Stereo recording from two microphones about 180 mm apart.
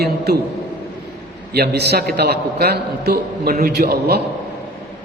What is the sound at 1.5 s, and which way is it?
A man's voice, 65° right (ahead or behind).